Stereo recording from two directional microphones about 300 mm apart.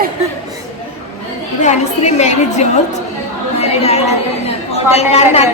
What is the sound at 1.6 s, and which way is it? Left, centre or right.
A woman's voice, left.